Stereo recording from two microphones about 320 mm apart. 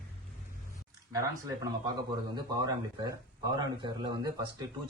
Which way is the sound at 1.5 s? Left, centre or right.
Centre.